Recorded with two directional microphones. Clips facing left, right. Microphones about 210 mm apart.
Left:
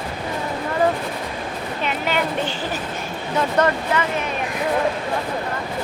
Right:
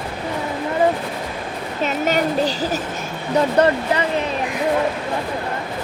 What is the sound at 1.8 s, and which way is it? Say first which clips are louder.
A woman's voice: right 4 dB; 40° right (ahead or behind).